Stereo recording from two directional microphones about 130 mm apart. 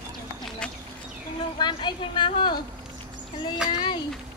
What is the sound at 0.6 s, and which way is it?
Speech, 5° left (ahead or behind).